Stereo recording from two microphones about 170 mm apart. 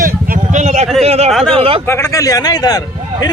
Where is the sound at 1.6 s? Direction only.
35° right (ahead or behind).